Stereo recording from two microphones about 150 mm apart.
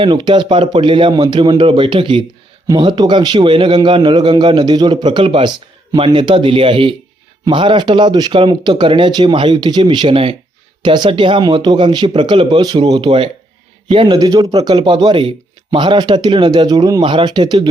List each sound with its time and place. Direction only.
0.0 s a man's voice: 30° right (ahead or behind)